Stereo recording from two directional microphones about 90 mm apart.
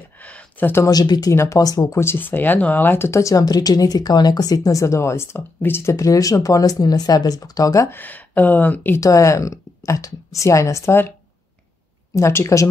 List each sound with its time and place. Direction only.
0.2 s a sound: 15° left (ahead or behind)
0.8 s speech: 45° left (ahead or behind)
1.3 s speech: 30° left (ahead or behind)
1.6 s speech: 45° left (ahead or behind)
2.0 s speech: 25° left (ahead or behind); by 4.6 s 45° left (ahead or behind)
4.6 s speech: 35° left (ahead or behind)
7.9 s speech: 20° left (ahead or behind)
9.0 s speech: 35° left (ahead or behind)
12.2 s speech: 30° left (ahead or behind)